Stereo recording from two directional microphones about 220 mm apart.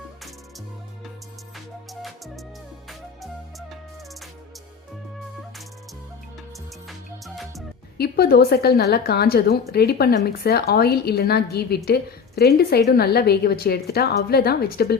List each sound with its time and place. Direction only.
1.5 s music: centre (ahead or behind)
7.9 s a woman's voice: 45° left (ahead or behind)